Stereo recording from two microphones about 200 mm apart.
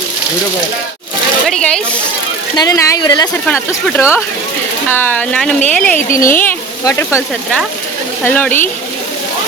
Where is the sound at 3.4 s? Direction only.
10° left (ahead or behind).